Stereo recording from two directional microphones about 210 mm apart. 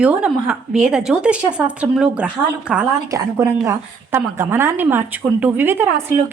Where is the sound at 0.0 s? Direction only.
5° right (ahead or behind).